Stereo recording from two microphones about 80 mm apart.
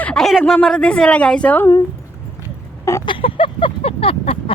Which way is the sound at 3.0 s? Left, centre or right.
Left.